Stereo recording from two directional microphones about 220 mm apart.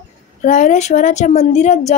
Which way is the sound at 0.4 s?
35° left (ahead or behind).